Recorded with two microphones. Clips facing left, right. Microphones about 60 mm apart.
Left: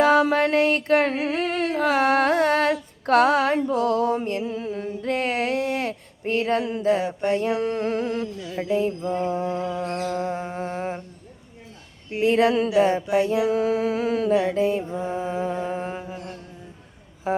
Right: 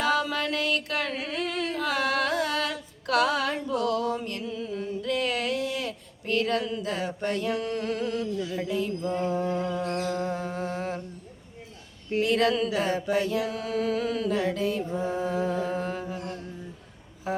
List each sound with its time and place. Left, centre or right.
0.0 s a sound: left
7.0 s mantra: centre
7.3 s a sound: left
9.0 s mantra: centre
10.3 s music: left
12.2 s music: left
13.0 s mantra: centre
13.2 s music: left
16.0 s mantra: centre
17.3 s a sound: left